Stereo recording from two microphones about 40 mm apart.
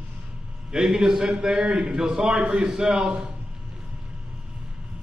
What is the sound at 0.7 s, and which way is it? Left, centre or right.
A man's voice, centre.